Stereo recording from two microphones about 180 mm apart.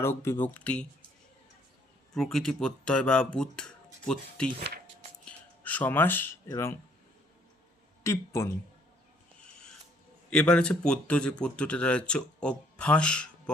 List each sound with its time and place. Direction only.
0.0 s speech: 15° left (ahead or behind)
2.1 s speech: centre (ahead or behind)
8.0 s speech: 15° left (ahead or behind)
10.2 s speech: 5° left (ahead or behind)